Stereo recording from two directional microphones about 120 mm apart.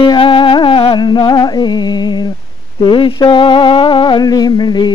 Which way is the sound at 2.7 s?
45° left (ahead or behind).